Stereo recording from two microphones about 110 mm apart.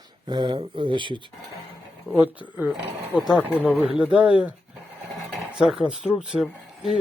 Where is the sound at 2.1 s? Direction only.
15° right (ahead or behind).